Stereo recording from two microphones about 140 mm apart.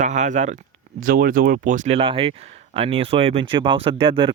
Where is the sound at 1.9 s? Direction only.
40° right (ahead or behind).